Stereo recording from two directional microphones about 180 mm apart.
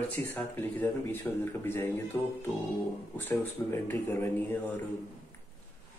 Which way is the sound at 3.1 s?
10° left (ahead or behind).